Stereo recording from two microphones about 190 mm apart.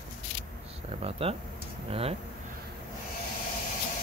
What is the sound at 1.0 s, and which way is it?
Speech, 30° right (ahead or behind).